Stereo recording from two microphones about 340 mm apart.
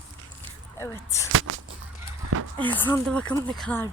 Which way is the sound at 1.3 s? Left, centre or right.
Right.